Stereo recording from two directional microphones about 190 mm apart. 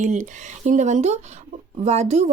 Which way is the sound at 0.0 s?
40° right (ahead or behind).